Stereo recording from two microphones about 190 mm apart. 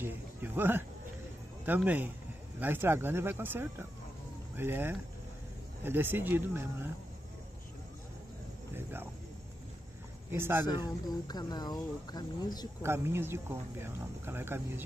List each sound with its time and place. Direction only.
0.0 s speech: 10° right (ahead or behind)
8.7 s speech: 10° right (ahead or behind)
10.3 s speech: 10° right (ahead or behind)
11.1 s speech: 20° left (ahead or behind)
12.8 s speech: 15° right (ahead or behind)